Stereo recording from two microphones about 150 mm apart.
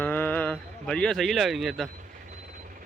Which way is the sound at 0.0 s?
10° left (ahead or behind).